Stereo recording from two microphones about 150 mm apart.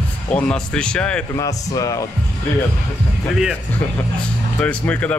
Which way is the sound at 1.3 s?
20° left (ahead or behind).